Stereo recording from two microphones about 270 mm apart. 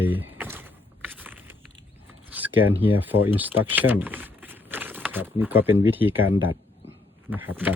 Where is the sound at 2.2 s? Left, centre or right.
Centre.